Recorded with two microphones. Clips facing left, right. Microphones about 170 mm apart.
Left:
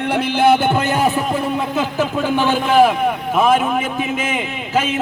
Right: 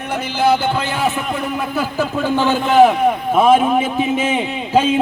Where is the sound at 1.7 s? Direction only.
15° left (ahead or behind).